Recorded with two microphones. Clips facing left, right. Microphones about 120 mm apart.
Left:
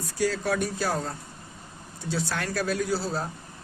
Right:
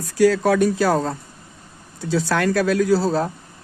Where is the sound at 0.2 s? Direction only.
90° right.